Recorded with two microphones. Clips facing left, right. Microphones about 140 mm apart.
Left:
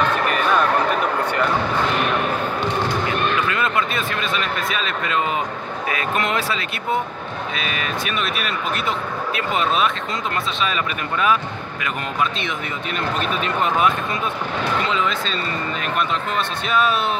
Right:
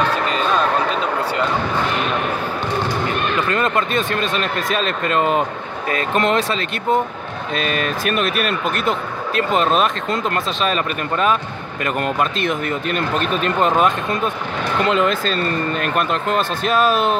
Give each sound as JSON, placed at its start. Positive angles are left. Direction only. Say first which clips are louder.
{"t": 0.1, "sound": "basketball bounce", "louder": "even", "side_deg": -25}
{"t": 3.4, "sound": "speech", "louder": "right 3 dB", "side_deg": -45}
{"t": 5.9, "sound": "speech", "louder": "right 5 dB", "side_deg": -35}
{"t": 7.6, "sound": "speech", "louder": "right 7 dB", "side_deg": -45}
{"t": 12.4, "sound": "speech", "louder": "right 6 dB", "side_deg": -50}
{"t": 14.9, "sound": "speech", "louder": "right 5 dB", "side_deg": -55}
{"t": 16.6, "sound": "speech", "louder": "right 3 dB", "side_deg": -40}